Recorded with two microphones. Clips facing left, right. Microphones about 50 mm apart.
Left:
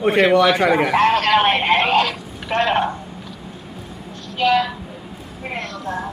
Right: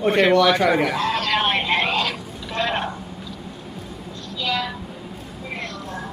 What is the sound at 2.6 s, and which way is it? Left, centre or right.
Speech, centre.